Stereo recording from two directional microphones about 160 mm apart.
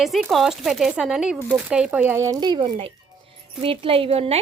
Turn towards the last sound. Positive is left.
turn(degrees=-40)  # may be behind; listen again after turning